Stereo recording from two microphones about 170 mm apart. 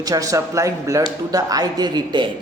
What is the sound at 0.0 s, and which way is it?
Speech, 20° right (ahead or behind).